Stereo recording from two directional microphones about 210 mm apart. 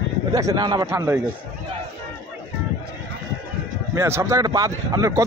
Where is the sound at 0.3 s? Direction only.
15° right (ahead or behind).